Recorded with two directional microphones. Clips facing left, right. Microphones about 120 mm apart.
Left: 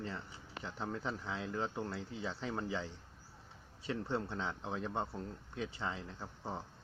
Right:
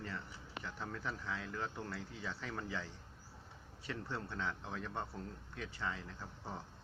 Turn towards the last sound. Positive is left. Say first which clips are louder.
# left 4 dB
turn(degrees=25)  # may be behind; listen again after turning